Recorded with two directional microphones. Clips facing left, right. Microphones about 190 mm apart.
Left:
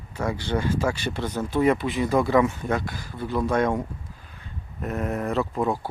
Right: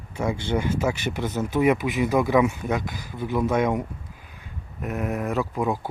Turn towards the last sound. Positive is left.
turn(degrees=-10)  # may be behind; listen again after turning